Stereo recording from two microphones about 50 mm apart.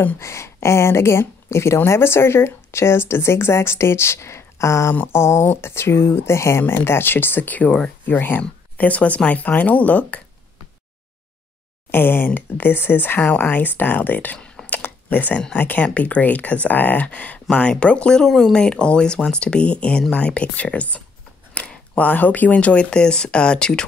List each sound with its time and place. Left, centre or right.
0.2 s speech: left
5.0 s speech: left
6.6 s speech: left
8.4 s speech: left
11.9 s speech: left
14.7 s a sound: left
15.5 s speech: left
17.5 s speech: centre
18.2 s speech: centre; by 21.0 s left
21.6 s a sound: left
21.9 s speech: left; by 23.9 s centre